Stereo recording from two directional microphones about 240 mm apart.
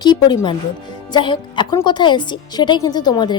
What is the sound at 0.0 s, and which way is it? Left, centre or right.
A woman's voice, centre.